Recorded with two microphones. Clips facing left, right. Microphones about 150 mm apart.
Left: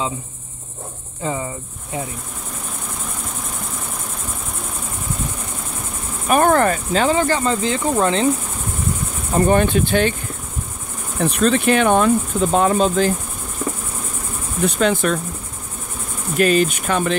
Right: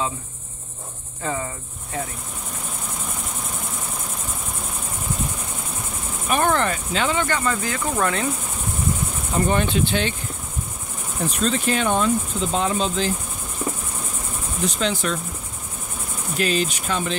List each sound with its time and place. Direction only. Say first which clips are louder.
1.2 s cricket: left 3 dB; 15° left (ahead or behind)
6.2 s speech: left 6 dB; 45° left (ahead or behind); by 8.3 s 25° left (ahead or behind)
9.3 s speech: left 6 dB; 50° left (ahead or behind)
11.1 s cricket: left 6 dB; 65° left (ahead or behind); by 13.1 s 50° left (ahead or behind)
14.6 s cricket: left 6 dB; 55° left (ahead or behind)
16.3 s speech: left 7 dB; 55° left (ahead or behind)